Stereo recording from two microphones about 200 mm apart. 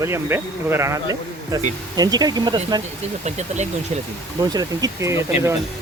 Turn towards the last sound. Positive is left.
turn(degrees=-15)  # may be behind; listen again after turning